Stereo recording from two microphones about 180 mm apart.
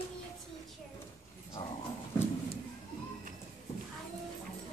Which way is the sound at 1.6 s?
30° left (ahead or behind).